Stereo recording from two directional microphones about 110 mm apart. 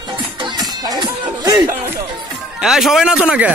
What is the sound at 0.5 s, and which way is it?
Music, 40° right (ahead or behind).